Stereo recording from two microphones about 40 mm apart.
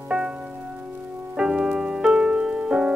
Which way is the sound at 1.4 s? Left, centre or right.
Centre.